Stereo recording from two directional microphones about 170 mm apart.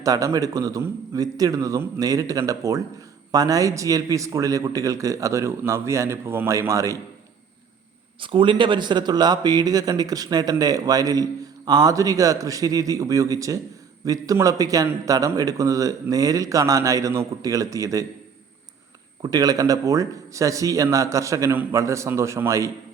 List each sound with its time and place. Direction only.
0.0 s a man's voice: 20° right (ahead or behind)
8.2 s a man's voice: 30° right (ahead or behind)
19.2 s a man's voice: 20° right (ahead or behind)